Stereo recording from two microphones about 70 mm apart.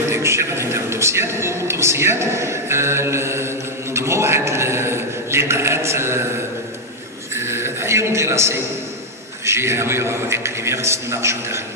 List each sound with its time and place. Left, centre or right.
0.1 s speech: right
7.3 s a sound: right
9.5 s speech: right